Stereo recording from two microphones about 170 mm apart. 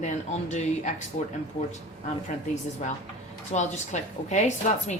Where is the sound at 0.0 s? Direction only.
45° left (ahead or behind).